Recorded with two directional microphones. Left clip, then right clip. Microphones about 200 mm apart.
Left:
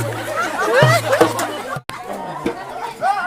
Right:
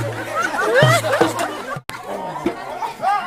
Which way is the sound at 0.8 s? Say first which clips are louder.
Left 1 dB; 5° right (ahead or behind).